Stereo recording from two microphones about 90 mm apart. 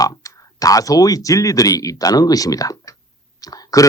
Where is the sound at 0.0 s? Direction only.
40° left (ahead or behind).